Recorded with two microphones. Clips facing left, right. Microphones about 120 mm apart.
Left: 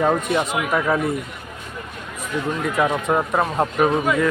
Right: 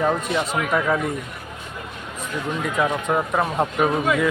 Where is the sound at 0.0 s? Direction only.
10° left (ahead or behind).